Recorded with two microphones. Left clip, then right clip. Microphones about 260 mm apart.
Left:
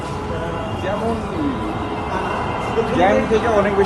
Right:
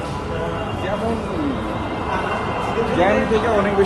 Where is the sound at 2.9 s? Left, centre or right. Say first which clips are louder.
Left 2 dB; centre.